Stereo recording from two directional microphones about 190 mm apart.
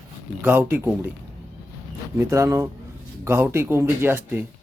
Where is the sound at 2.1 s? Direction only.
15° right (ahead or behind).